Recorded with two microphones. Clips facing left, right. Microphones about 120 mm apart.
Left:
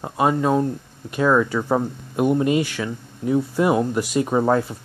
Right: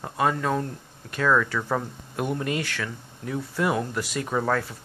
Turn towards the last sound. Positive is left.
turn(degrees=20)  # may be behind; listen again after turning